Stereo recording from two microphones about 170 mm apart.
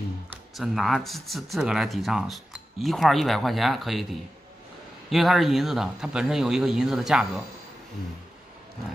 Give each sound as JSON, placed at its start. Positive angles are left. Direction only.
{"t": 0.3, "sound": "speech", "side_deg": 0}